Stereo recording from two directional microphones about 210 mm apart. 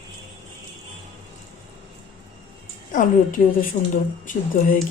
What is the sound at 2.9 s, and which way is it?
Speech, 40° left (ahead or behind).